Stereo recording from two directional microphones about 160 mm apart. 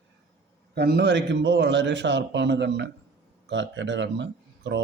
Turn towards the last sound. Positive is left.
turn(degrees=-90)